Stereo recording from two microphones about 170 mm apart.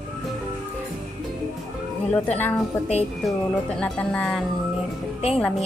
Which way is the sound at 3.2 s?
5° left (ahead or behind).